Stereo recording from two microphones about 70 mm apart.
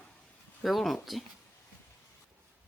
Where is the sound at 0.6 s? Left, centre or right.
Centre.